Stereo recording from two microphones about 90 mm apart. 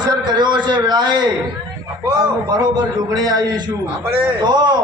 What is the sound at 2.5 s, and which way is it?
A man's voice, 50° right (ahead or behind).